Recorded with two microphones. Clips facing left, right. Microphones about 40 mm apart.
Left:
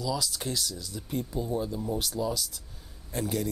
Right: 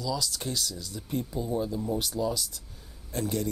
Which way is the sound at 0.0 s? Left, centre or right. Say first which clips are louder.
Even; centre.